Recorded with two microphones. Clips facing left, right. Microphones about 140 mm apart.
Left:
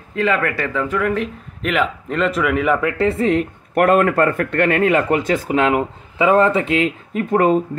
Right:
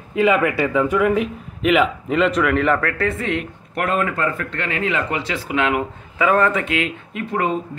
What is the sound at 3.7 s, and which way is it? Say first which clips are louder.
Speech: left 7 dB; 50° left (ahead or behind).